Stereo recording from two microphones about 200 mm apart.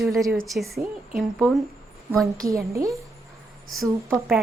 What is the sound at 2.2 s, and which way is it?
Speech, 15° right (ahead or behind).